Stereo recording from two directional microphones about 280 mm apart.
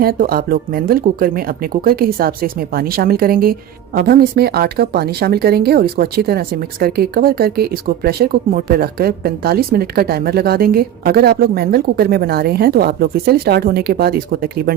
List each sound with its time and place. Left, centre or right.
0.0 s speech: right